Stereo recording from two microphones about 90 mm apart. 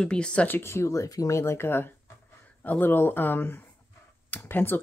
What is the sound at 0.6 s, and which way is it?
Speech, 30° left (ahead or behind).